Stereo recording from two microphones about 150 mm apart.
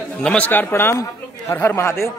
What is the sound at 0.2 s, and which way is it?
Speech, 5° left (ahead or behind).